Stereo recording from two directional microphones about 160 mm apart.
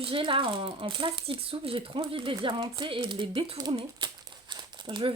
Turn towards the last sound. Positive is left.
turn(degrees=-30)  # may be behind; listen again after turning